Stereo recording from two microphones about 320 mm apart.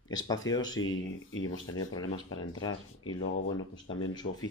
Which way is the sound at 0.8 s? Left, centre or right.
Left.